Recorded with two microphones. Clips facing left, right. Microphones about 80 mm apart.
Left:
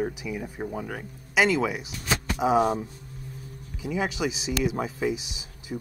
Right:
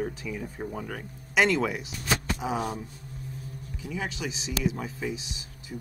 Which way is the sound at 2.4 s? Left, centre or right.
Left.